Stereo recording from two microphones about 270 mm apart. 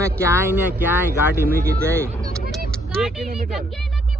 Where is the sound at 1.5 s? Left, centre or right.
Right.